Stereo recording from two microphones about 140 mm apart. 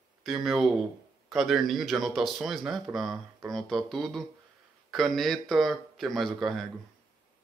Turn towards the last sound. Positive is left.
turn(degrees=0)  # may be behind; listen again after turning